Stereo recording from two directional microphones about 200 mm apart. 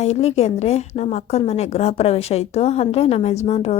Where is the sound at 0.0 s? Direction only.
35° left (ahead or behind).